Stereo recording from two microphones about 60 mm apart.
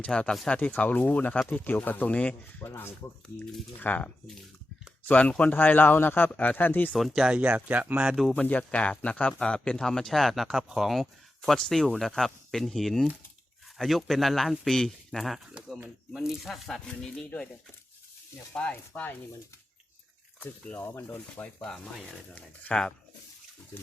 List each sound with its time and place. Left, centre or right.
0.1 s a man's voice: centre; by 2.9 s left
3.8 s a man's voice: left
6.3 s speech: left
6.6 s a man's voice: left
6.9 s speech: centre
7.3 s speech: right
8.3 s speech: left; by 16.8 s centre
16.8 s speech: centre
18.7 s speech: left
20.7 s a man's voice: left
21.4 s speech: centre